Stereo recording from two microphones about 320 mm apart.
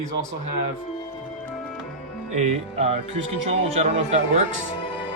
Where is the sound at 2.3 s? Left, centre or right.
Centre.